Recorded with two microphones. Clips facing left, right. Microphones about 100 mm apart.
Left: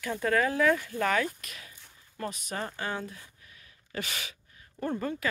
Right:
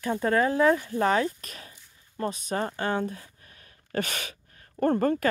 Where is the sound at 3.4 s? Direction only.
45° right (ahead or behind).